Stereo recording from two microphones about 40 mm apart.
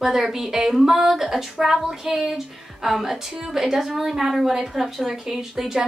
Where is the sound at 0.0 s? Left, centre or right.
Centre.